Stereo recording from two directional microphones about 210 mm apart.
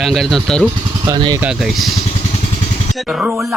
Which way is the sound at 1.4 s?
5° right (ahead or behind).